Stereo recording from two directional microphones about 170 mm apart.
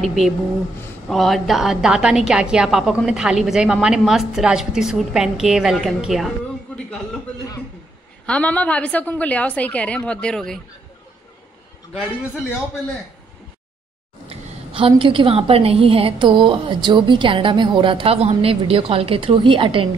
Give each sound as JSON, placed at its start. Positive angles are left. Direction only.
{"t": 0.0, "sound": "a woman's voice", "side_deg": 0}
{"t": 8.3, "sound": "a woman's voice", "side_deg": 10}
{"t": 14.2, "sound": "a woman's voice", "side_deg": -35}